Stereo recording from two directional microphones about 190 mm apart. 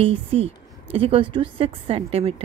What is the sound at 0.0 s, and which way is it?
A woman's voice, 30° right (ahead or behind).